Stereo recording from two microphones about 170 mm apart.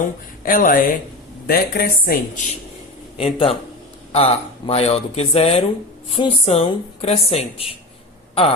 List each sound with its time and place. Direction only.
0.0 s a woman's voice: 55° left (ahead or behind)
3.2 s speech: 35° left (ahead or behind)